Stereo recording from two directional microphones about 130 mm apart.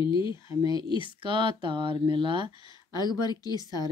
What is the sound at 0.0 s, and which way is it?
Speech, 40° left (ahead or behind).